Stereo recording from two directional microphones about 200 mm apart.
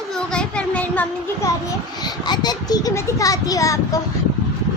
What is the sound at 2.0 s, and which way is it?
A child's voice, 20° left (ahead or behind).